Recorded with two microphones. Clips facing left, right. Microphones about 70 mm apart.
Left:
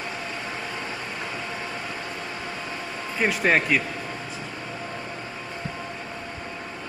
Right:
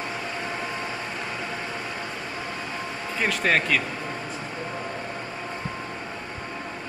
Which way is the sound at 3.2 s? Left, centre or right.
Centre.